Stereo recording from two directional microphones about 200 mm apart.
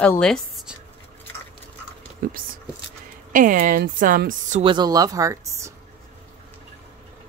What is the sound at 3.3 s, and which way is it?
A woman's voice, 40° right (ahead or behind).